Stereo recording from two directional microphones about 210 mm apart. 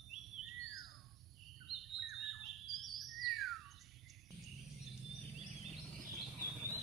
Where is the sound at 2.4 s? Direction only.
Centre (ahead or behind).